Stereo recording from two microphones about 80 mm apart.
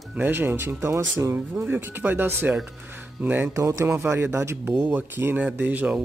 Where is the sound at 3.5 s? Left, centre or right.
Right.